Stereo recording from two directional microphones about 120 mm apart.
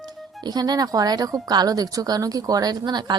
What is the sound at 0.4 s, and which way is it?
Speech, 35° right (ahead or behind).